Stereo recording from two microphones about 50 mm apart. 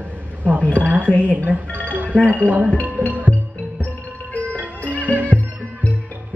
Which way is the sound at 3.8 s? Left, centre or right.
Left.